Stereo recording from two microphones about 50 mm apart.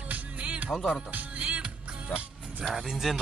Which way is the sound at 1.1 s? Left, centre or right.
Right.